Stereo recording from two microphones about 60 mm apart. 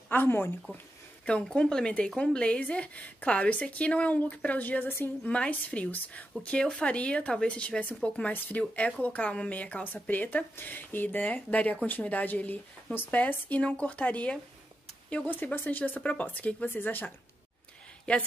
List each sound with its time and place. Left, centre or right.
0.1 s speech: left
1.2 s a woman's voice: centre; by 5.3 s left
5.3 s a woman's voice: left
6.4 s a woman's voice: centre; by 17.1 s left
18.1 s a woman's voice: centre